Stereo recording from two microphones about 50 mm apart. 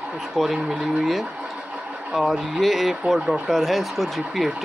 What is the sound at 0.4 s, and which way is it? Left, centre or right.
Speech, centre.